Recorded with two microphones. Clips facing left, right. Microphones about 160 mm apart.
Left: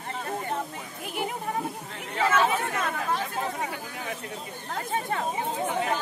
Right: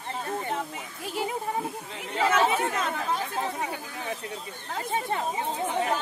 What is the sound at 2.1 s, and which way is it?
Speech, 15° right (ahead or behind).